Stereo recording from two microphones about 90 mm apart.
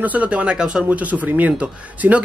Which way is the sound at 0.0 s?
15° right (ahead or behind).